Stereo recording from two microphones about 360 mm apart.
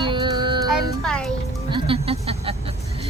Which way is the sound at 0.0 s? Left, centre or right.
Centre.